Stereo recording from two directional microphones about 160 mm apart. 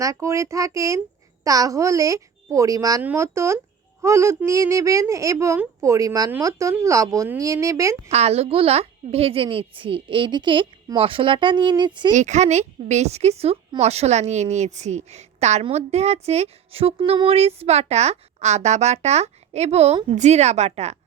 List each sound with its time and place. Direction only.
0.0 s a woman's voice: 20° right (ahead or behind)
8.1 s a child's voice: 40° right (ahead or behind)
12.1 s speech: 50° right (ahead or behind)